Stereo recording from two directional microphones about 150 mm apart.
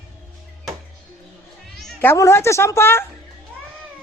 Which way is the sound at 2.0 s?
15° left (ahead or behind).